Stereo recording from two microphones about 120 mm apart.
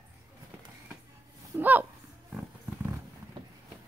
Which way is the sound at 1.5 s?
15° right (ahead or behind).